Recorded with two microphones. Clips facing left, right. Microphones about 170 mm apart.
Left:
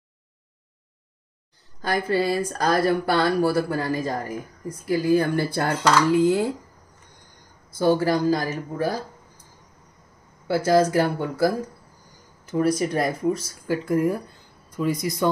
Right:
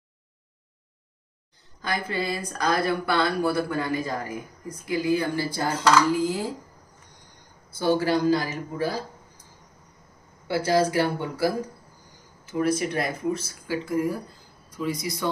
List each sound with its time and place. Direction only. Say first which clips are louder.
1.8 s speech: left 6 dB; 40° left (ahead or behind); by 6.4 s 65° left (ahead or behind)
8.0 s speech: left 1 dB; 40° left (ahead or behind)
10.5 s speech: left 3 dB; 45° left (ahead or behind)
13.8 s speech: left 4 dB; 55° left (ahead or behind)